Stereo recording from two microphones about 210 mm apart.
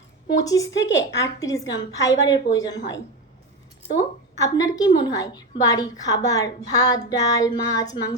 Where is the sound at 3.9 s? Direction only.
15° left (ahead or behind).